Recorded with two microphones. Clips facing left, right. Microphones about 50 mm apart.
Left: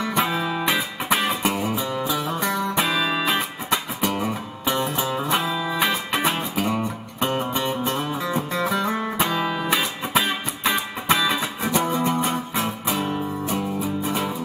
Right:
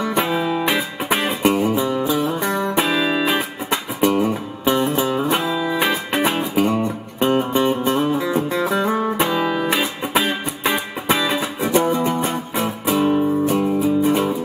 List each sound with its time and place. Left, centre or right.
0.2 s music: centre
5.4 s music: centre
12.3 s music: centre